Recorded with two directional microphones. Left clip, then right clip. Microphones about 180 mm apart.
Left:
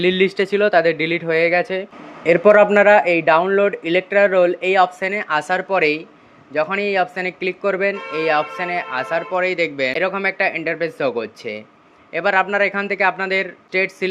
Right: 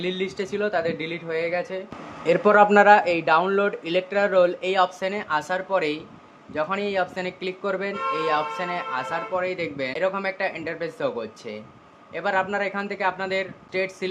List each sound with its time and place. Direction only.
0.0 s speech: 30° left (ahead or behind)
2.2 s speech: 10° left (ahead or behind)
9.3 s speech: 30° left (ahead or behind)